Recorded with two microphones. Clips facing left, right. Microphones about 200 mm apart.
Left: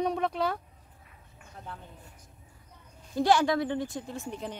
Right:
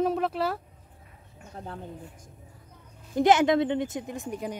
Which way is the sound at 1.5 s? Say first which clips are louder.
Right 5 dB; 40° right (ahead or behind).